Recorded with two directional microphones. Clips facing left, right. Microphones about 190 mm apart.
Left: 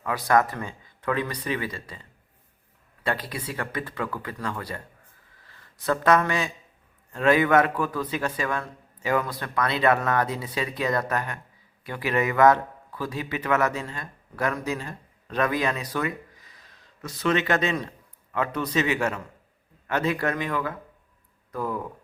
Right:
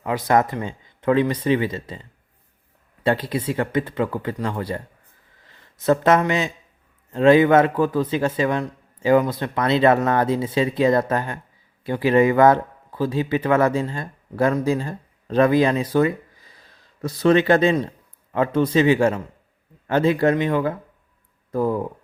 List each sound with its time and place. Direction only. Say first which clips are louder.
0.0 s a man's voice: right 3 dB; 20° right (ahead or behind)